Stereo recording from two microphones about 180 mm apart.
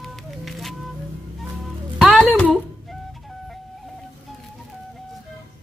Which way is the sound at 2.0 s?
5° left (ahead or behind).